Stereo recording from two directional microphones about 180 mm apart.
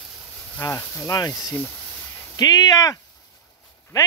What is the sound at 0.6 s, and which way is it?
A man's voice, 15° left (ahead or behind).